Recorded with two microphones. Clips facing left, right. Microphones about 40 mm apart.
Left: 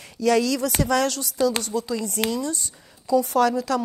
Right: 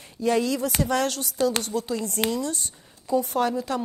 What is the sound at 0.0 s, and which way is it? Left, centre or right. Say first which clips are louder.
A woman's voice: left 3 dB; left.